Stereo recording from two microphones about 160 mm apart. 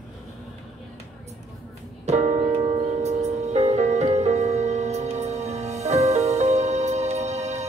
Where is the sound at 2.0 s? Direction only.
45° right (ahead or behind).